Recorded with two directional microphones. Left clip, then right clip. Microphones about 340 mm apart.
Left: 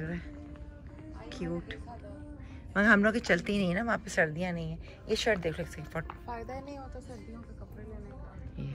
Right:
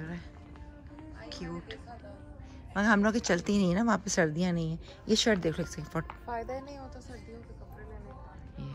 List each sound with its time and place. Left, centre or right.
1.3 s speech: centre
6.0 s speech: left